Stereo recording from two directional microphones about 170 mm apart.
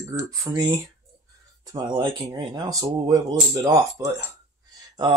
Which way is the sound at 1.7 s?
25° right (ahead or behind).